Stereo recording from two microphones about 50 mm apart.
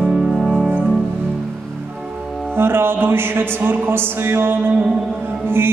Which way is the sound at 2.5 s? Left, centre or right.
Right.